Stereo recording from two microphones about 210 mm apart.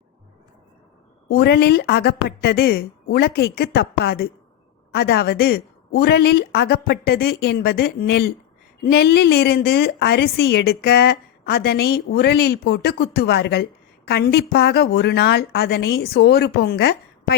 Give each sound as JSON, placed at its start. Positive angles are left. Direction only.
{"t": 1.3, "sound": "a woman's voice", "side_deg": 50}